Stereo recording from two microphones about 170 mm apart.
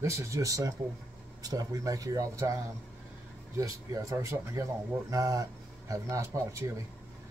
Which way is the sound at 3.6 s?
20° right (ahead or behind).